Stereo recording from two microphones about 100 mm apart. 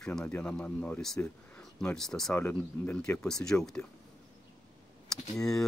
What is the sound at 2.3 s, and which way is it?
Speech, 20° left (ahead or behind).